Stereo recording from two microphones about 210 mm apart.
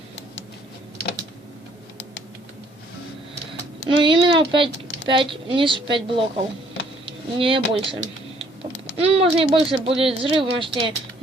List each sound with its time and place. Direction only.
3.8 s speech: 25° right (ahead or behind)
9.0 s speech: 25° right (ahead or behind)